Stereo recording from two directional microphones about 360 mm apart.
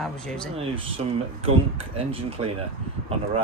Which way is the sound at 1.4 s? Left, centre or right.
Centre.